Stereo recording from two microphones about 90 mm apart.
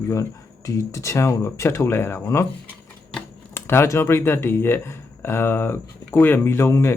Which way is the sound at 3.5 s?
30° left (ahead or behind).